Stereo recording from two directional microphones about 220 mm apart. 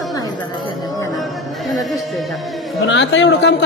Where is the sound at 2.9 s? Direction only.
55° left (ahead or behind).